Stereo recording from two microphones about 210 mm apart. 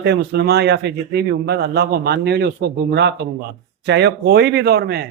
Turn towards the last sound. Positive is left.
turn(degrees=-50)  # may be behind; listen again after turning